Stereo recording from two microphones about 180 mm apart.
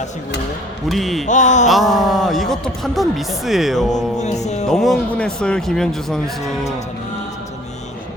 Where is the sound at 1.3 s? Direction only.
40° left (ahead or behind).